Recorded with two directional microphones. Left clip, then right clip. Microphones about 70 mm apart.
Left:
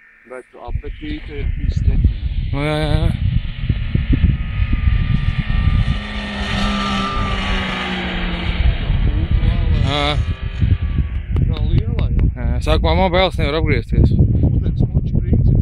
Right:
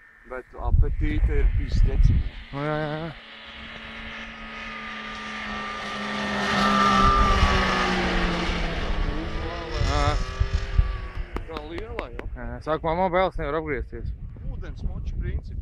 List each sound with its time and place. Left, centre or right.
2.5 s speech: centre
3.3 s vehicle: right
9.8 s vehicle: left
11.3 s a sound: left
12.4 s speech: centre
14.6 s a sound: left